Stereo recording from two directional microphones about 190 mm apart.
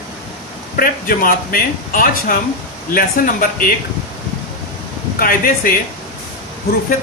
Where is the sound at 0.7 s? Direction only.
50° left (ahead or behind).